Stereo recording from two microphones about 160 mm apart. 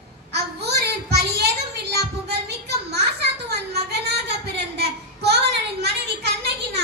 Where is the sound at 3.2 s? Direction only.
90° right.